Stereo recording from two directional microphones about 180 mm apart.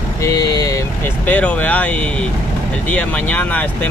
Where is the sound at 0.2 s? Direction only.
20° left (ahead or behind).